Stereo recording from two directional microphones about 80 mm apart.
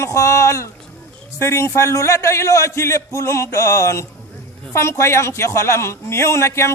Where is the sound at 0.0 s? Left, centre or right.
Left.